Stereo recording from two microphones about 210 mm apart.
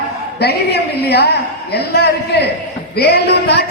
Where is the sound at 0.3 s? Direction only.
50° left (ahead or behind).